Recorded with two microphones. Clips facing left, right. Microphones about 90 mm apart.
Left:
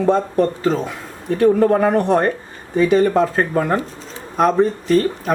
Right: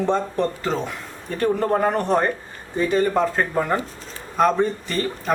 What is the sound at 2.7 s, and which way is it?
Speech, 80° left.